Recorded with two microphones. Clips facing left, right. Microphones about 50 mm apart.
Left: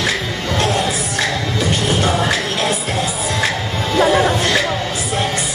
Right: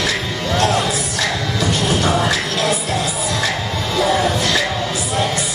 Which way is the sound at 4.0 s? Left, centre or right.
Left.